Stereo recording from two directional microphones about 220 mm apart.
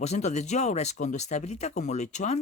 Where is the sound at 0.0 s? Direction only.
30° left (ahead or behind).